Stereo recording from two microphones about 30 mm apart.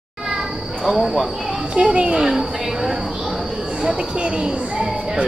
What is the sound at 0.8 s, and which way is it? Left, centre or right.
Speech, centre.